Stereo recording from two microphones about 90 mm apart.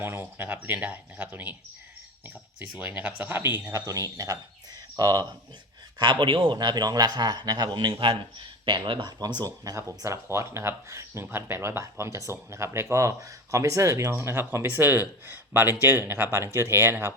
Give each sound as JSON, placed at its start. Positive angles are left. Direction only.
{"t": 0.0, "sound": "speech", "side_deg": -25}
{"t": 3.8, "sound": "speech", "side_deg": -40}
{"t": 6.0, "sound": "speech", "side_deg": -65}
{"t": 8.6, "sound": "speech", "side_deg": -60}